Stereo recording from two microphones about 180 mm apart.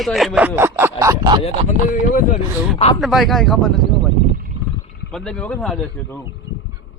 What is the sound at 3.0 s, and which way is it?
Speech, centre (ahead or behind).